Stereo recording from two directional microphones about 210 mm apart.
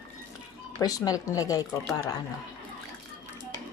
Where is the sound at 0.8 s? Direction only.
15° left (ahead or behind).